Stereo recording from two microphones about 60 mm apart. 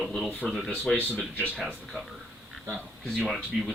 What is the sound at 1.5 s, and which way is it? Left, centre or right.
Speech, centre.